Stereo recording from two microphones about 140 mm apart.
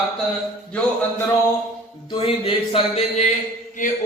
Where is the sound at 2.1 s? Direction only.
40° left (ahead or behind).